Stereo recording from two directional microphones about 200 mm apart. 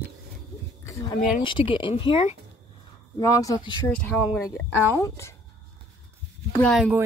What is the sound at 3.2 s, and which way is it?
Speech, 15° left (ahead or behind).